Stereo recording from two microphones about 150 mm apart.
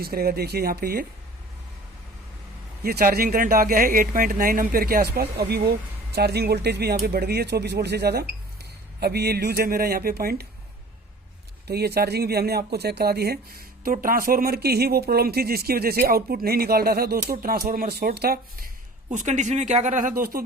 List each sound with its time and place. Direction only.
0.0 s speech: 90° right
2.8 s speech: 75° right (ahead or behind)
11.7 s speech: 90° right
17.2 s speech: 80° right
19.1 s speech: 55° right (ahead or behind); by 20.4 s 75° right (ahead or behind)